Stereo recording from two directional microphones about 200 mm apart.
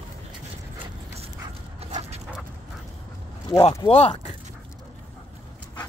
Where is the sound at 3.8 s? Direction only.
30° left (ahead or behind).